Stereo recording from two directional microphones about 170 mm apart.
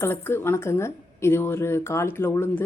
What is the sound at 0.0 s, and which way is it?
A woman's voice, 15° left (ahead or behind).